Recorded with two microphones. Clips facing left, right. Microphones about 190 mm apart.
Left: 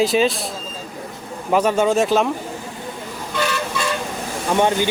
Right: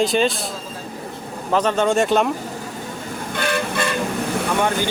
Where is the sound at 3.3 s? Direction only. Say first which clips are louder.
Even; 55° right (ahead or behind).